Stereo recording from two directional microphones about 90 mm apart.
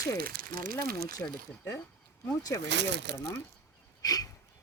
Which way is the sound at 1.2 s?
25° left (ahead or behind).